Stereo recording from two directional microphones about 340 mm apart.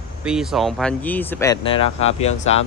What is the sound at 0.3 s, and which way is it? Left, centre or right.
Speech, centre.